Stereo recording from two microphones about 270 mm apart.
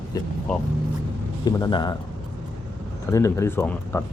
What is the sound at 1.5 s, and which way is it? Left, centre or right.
Speech, centre.